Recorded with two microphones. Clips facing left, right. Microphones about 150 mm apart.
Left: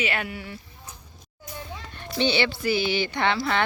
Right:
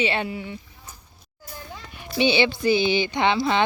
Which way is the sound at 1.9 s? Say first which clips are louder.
Right 3 dB; 10° right (ahead or behind).